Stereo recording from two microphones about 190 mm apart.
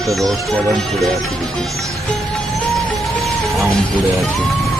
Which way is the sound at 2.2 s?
Centre (ahead or behind).